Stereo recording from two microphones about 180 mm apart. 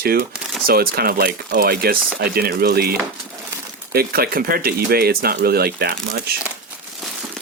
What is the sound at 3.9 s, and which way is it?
Speech, 60° right (ahead or behind).